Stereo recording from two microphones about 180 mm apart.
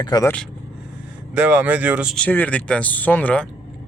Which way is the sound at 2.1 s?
10° left (ahead or behind).